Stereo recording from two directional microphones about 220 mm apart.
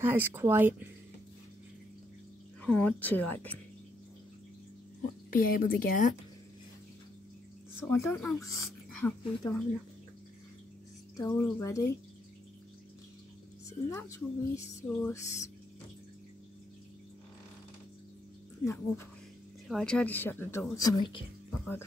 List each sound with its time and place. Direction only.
0.0 s speech: 10° right (ahead or behind)
2.6 s speech: 5° left (ahead or behind)
5.3 s a woman's voice: 40° left (ahead or behind)
7.9 s speech: 10° left (ahead or behind)
11.1 s speech: 15° left (ahead or behind)
13.7 s speech: 15° left (ahead or behind)
18.6 s speech: 15° left (ahead or behind)